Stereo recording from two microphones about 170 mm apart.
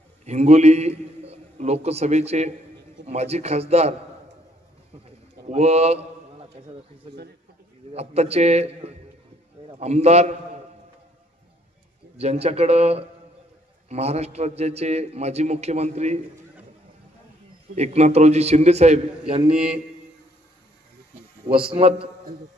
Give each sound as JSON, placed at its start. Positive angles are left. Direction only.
{"t": 0.2, "sound": "a man's voice", "side_deg": -40}
{"t": 5.5, "sound": "a man's voice", "side_deg": -40}
{"t": 7.9, "sound": "a man's voice", "side_deg": -40}
{"t": 12.2, "sound": "a man's voice", "side_deg": -40}
{"t": 17.7, "sound": "a man's voice", "side_deg": -40}
{"t": 19.5, "sound": "a man's voice", "side_deg": -5}
{"t": 21.7, "sound": "a man's voice", "side_deg": -35}